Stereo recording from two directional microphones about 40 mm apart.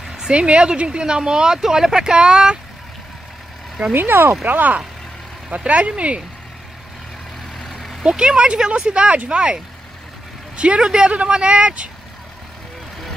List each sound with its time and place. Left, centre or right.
0.3 s speech: right
3.9 s speech: right
4.5 s speech: right
8.0 s speech: centre
10.5 s vehicle: right
10.8 s speech: centre
11.1 s speech: right